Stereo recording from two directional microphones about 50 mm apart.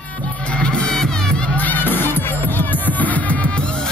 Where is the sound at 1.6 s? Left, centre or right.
Left.